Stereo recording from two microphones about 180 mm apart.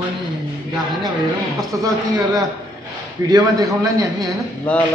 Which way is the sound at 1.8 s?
20° right (ahead or behind).